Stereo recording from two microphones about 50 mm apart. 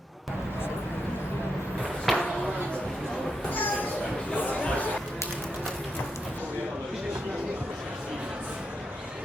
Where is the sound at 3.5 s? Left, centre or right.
Left.